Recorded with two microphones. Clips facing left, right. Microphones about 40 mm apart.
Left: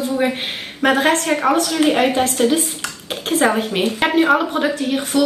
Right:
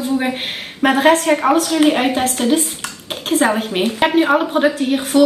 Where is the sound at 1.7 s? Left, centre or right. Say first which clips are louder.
Right 1 dB; centre.